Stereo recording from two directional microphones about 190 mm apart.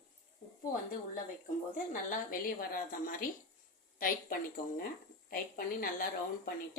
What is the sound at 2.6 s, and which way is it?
A woman's voice, 45° left (ahead or behind).